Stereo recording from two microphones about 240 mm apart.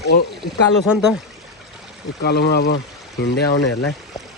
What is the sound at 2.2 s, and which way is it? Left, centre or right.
Speech, left.